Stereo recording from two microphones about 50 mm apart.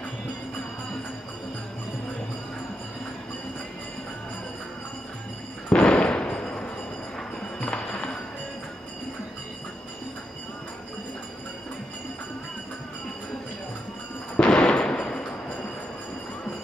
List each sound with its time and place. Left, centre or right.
5.7 s fireworks: centre
6.3 s a sound: centre
14.3 s gunshot: centre